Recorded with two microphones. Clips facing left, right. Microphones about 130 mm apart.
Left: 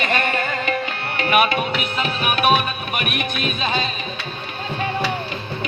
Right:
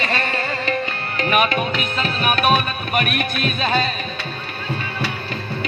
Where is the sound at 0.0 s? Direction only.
35° right (ahead or behind).